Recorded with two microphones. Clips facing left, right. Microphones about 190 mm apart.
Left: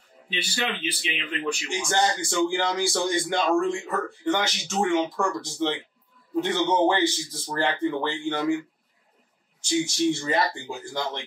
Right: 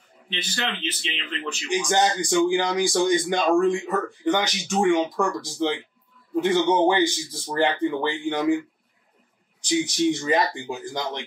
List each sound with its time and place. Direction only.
0.3 s speech: 10° left (ahead or behind)
1.7 s a man's voice: 15° right (ahead or behind)
9.6 s a man's voice: 15° right (ahead or behind)